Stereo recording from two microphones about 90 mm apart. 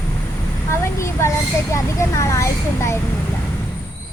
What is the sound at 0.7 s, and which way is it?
A woman's voice, 30° left (ahead or behind).